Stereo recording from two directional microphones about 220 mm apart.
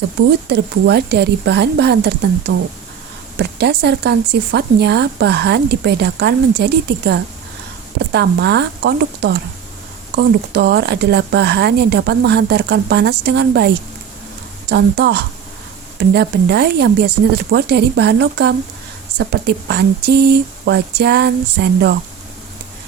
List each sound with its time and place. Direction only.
0.4 s speech: 50° right (ahead or behind)
2.5 s speech: 60° right (ahead or behind)
3.3 s speech: 50° right (ahead or behind)